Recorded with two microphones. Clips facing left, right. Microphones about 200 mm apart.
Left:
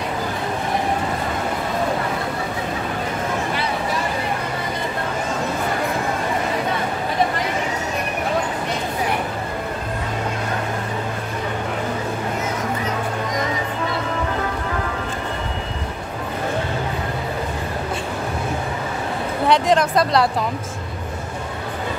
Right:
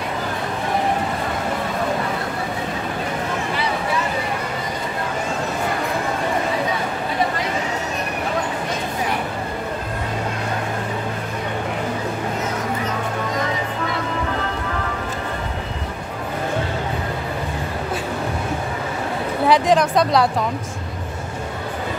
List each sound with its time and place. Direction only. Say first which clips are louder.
19.4 s speech: right 1 dB; centre (ahead or behind)